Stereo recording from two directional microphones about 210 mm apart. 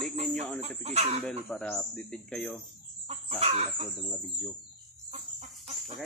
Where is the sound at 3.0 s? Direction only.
30° right (ahead or behind).